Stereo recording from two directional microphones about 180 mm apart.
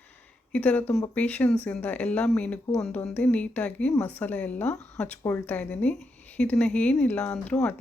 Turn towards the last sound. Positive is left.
turn(degrees=5)  # may be behind; listen again after turning